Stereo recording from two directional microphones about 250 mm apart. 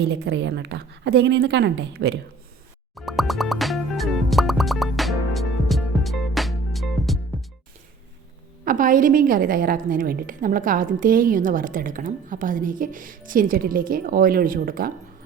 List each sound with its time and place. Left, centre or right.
0.0 s a woman's voice: right
2.9 s music: centre
8.6 s a woman's voice: right